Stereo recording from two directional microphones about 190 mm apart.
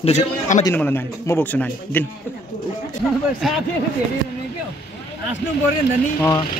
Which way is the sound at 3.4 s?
Centre (ahead or behind).